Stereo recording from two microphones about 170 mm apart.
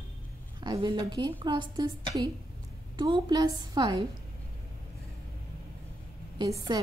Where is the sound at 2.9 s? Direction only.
25° right (ahead or behind).